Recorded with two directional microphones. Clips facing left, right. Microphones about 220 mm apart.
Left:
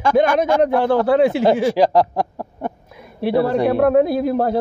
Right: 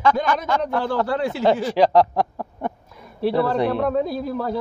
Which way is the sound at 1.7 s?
5° left (ahead or behind).